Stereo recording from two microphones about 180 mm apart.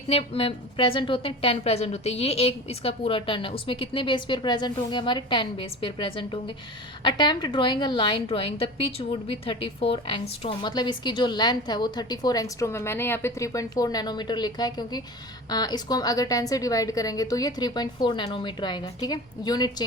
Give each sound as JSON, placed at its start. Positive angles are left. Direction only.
{"t": 0.1, "sound": "a woman's voice", "side_deg": 30}